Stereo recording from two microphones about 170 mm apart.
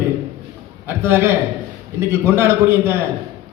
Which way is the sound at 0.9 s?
15° right (ahead or behind).